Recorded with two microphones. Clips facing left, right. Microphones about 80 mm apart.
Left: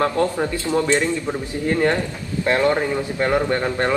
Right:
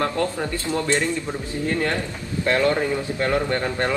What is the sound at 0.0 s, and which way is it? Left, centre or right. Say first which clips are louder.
Speech: left 4 dB; left.